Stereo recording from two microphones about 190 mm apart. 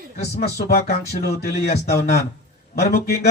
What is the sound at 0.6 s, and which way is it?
Speech, 55° left (ahead or behind).